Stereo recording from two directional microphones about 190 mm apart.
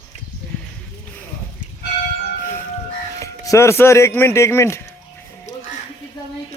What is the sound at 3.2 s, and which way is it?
Speech, 15° left (ahead or behind).